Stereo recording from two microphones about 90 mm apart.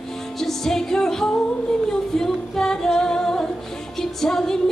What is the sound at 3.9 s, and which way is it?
Music, 5° left (ahead or behind).